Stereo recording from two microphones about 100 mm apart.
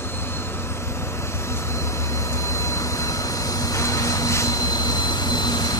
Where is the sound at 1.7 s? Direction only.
30° left (ahead or behind).